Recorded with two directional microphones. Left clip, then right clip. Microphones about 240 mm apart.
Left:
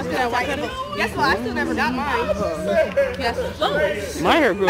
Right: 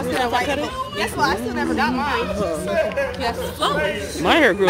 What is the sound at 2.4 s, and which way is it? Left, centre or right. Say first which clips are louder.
Speech: left 1 dB; right.